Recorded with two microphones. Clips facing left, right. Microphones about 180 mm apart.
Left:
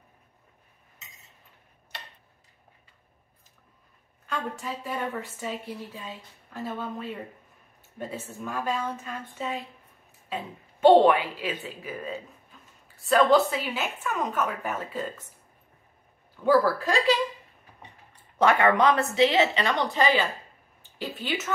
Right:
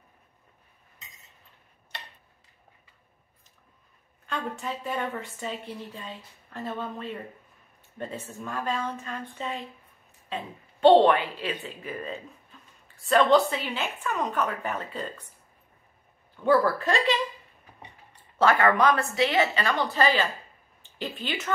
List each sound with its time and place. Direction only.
4.3 s a woman's voice: centre (ahead or behind)
16.4 s a woman's voice: 5° left (ahead or behind)
18.4 s speech: 20° left (ahead or behind)
21.0 s a woman's voice: 5° left (ahead or behind)